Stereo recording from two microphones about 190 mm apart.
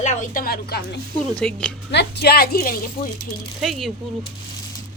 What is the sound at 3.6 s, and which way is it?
Speech, centre (ahead or behind).